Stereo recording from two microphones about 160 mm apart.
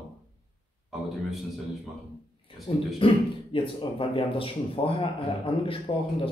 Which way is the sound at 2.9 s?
35° left (ahead or behind).